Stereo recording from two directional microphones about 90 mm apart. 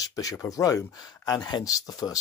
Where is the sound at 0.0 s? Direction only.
40° left (ahead or behind).